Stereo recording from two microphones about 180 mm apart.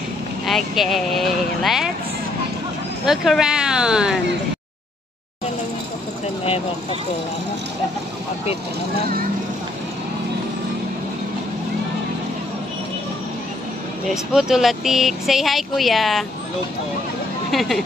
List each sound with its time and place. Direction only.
0.5 s speech: centre (ahead or behind)
3.1 s speech: 5° right (ahead or behind)
6.4 s speech: 30° left (ahead or behind)
14.3 s speech: centre (ahead or behind)
17.5 s speech: centre (ahead or behind)